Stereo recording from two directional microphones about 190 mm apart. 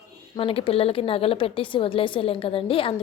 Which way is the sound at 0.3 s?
30° left (ahead or behind).